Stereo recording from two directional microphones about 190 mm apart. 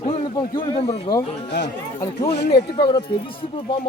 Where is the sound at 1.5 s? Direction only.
60° left (ahead or behind).